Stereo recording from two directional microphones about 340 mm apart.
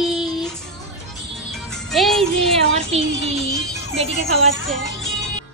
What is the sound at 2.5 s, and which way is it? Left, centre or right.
Speech, centre.